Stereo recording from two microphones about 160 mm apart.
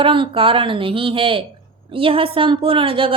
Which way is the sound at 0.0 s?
35° right (ahead or behind).